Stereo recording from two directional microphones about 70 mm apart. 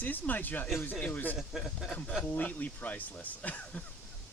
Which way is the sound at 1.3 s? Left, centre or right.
Centre.